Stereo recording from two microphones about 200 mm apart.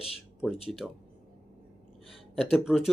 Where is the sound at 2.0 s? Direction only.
Centre (ahead or behind).